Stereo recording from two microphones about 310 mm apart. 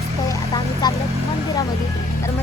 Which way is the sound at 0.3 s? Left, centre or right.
Centre.